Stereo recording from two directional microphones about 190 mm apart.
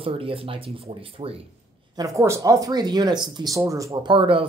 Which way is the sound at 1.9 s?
15° right (ahead or behind).